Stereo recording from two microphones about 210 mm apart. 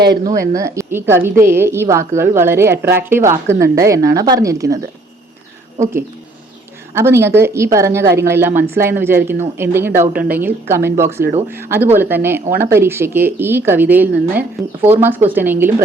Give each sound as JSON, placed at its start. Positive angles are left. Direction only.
{"t": 0.5, "sound": "speech", "side_deg": -15}